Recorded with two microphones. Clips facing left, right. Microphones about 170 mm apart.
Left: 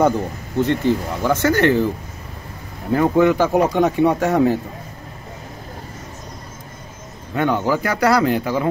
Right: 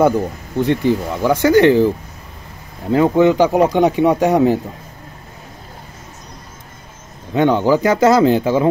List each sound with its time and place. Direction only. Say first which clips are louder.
0.6 s speech: right 2 dB; 15° right (ahead or behind)
2.9 s speech: right 3 dB; 20° right (ahead or behind)
7.3 s speech: right 5 dB; 20° right (ahead or behind)